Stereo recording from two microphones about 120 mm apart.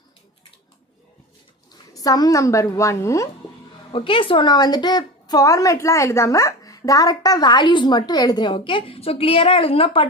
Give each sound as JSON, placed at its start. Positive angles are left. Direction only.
{"t": 1.9, "sound": "a woman's voice", "side_deg": 30}
{"t": 3.9, "sound": "a woman's voice", "side_deg": 45}